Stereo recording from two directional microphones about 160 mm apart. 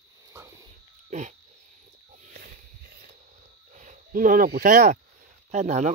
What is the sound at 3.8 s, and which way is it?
Speech, 55° right (ahead or behind).